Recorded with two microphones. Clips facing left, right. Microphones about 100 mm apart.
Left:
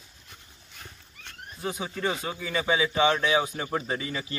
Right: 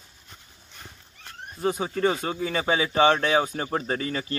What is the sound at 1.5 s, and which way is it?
Speech, 45° right (ahead or behind).